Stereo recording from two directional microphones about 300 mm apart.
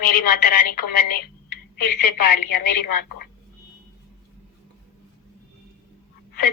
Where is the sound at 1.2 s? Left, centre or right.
Left.